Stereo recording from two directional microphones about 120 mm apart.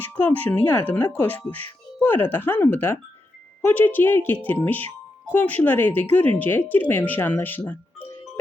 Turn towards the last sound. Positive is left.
turn(degrees=15)  # may be behind; listen again after turning